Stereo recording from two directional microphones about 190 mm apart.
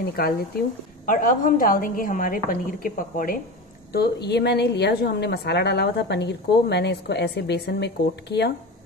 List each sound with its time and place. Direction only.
0.0 s a woman's voice: 55° left (ahead or behind)
3.9 s a woman's voice: 60° left (ahead or behind)